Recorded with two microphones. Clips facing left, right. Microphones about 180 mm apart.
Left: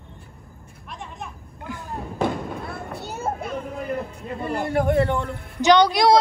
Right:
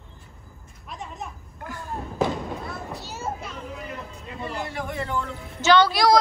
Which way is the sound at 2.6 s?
55° left (ahead or behind).